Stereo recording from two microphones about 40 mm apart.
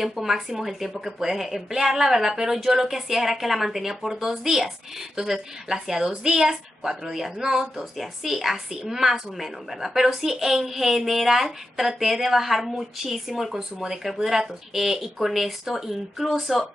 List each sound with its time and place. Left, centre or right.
0.0 s speech: centre